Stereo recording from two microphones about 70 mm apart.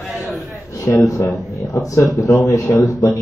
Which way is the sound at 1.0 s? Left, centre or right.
Left.